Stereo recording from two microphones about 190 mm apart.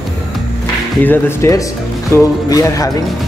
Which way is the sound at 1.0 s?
10° left (ahead or behind).